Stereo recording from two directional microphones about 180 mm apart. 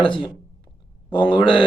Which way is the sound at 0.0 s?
25° left (ahead or behind).